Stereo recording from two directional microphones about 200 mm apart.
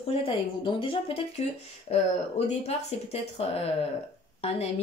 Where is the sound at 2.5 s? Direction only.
30° left (ahead or behind).